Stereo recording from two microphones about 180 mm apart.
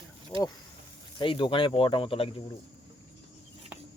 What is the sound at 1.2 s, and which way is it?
Speech, 25° left (ahead or behind).